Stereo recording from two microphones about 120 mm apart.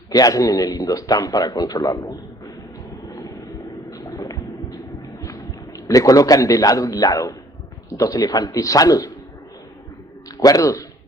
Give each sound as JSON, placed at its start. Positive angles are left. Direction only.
{"t": 0.1, "sound": "a man's voice", "side_deg": 30}
{"t": 3.1, "sound": "vehicle", "side_deg": 30}
{"t": 3.8, "sound": "a sound", "side_deg": 30}
{"t": 5.2, "sound": "a man's voice", "side_deg": 30}
{"t": 10.3, "sound": "a man's voice", "side_deg": 30}